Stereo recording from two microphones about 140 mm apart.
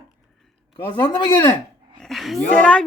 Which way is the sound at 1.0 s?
30° left (ahead or behind).